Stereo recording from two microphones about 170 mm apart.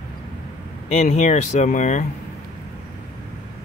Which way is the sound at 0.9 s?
45° left (ahead or behind).